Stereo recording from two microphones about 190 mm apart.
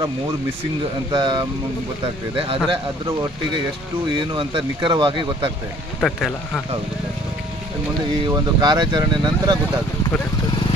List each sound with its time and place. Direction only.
1.1 s speech: 20° right (ahead or behind)
5.9 s speech: centre (ahead or behind)
8.3 s speech: 20° right (ahead or behind)